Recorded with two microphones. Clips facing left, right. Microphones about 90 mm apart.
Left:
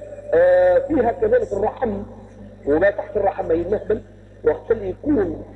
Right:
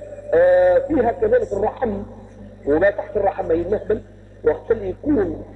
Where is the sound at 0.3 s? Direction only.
10° right (ahead or behind).